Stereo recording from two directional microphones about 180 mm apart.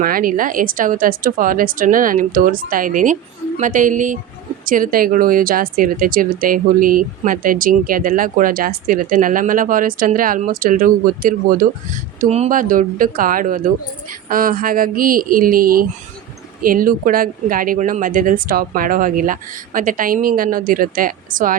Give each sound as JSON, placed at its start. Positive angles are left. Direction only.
{"t": 0.0, "sound": "speech", "side_deg": -50}